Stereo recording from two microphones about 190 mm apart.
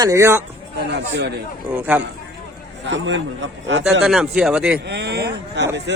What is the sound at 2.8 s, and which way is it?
A man's voice, 75° right (ahead or behind).